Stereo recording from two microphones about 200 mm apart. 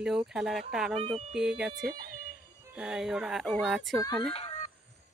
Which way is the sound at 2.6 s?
5° right (ahead or behind).